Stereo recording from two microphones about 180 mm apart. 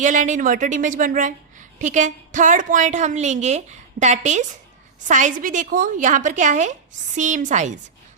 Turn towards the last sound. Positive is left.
turn(degrees=-45)  # may be behind; listen again after turning